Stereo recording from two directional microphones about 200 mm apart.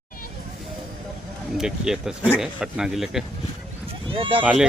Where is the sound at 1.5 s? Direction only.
5° right (ahead or behind).